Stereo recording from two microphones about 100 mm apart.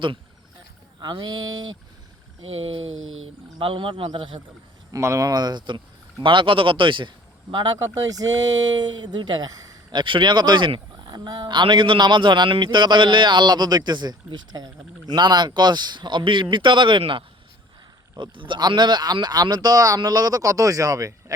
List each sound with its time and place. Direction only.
1.0 s a man's voice: 45° right (ahead or behind)
3.6 s speech: 60° right (ahead or behind)
4.9 s a man's voice: 30° right (ahead or behind)
10.0 s a man's voice: 55° right (ahead or behind); by 21.3 s 35° right (ahead or behind)